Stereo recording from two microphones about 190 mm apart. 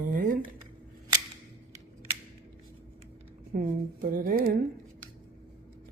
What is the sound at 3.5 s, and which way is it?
Speech, 45° right (ahead or behind).